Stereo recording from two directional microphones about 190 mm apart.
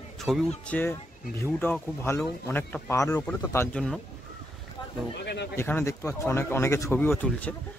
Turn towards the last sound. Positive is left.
turn(degrees=10)  # may be behind; listen again after turning